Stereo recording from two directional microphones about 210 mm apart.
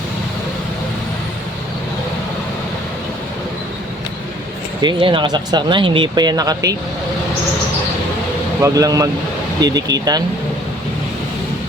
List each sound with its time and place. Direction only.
4.8 s speech: 20° right (ahead or behind)
8.6 s speech: 15° right (ahead or behind)